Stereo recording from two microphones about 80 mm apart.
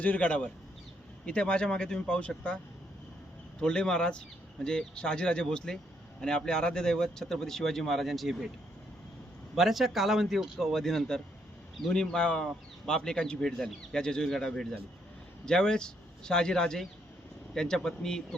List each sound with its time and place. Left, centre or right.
0.0 s speech: centre
3.6 s speech: centre
9.6 s speech: centre